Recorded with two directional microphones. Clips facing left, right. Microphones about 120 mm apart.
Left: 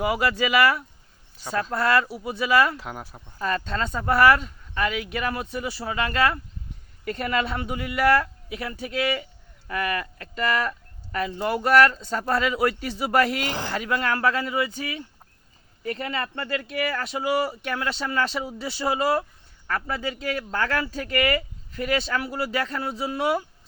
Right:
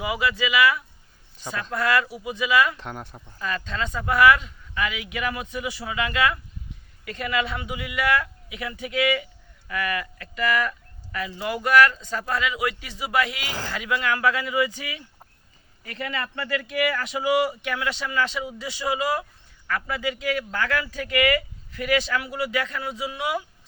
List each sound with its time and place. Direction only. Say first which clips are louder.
0.0 s speech: left 2 dB; 45° left (ahead or behind)
2.7 s speech: even; 5° left (ahead or behind)
3.3 s speech: left 3 dB; 40° left (ahead or behind)
13.5 s speech: left 2 dB; 20° left (ahead or behind)
13.7 s speech: even; 40° left (ahead or behind)